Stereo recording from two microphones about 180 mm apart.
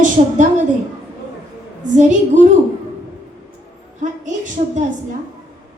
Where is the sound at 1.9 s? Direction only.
45° right (ahead or behind).